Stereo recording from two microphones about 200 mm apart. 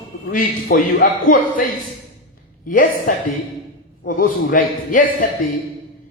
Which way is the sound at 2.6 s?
45° left (ahead or behind).